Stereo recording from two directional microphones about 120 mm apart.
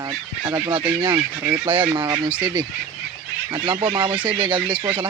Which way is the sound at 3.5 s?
45° right (ahead or behind).